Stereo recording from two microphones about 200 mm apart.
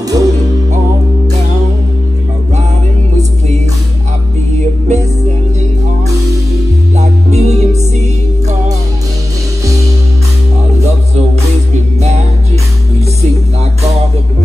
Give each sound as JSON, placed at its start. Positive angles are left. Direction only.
{"t": 0.0, "sound": "music", "side_deg": -15}
{"t": 3.2, "sound": "music", "side_deg": -35}
{"t": 7.0, "sound": "music", "side_deg": -35}